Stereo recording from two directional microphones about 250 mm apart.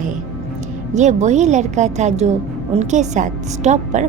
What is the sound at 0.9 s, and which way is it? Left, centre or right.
A woman's voice, right.